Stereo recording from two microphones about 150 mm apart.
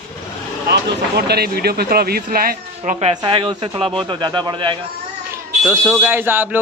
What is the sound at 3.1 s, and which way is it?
Speech, 30° right (ahead or behind).